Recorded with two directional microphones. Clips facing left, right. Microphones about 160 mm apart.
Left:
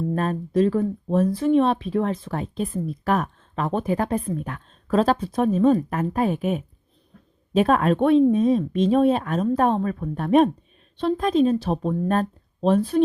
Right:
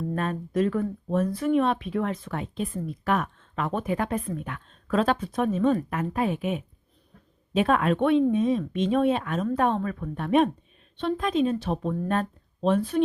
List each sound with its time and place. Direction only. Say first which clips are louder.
0.1 s speech: left 4 dB; 35° left (ahead or behind)